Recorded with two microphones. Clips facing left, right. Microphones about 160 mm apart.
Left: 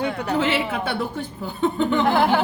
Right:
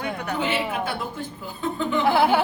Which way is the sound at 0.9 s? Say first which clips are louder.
Left 4 dB; 75° left (ahead or behind).